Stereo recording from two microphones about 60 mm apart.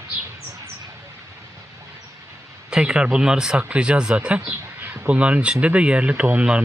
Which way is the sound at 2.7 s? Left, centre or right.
Centre.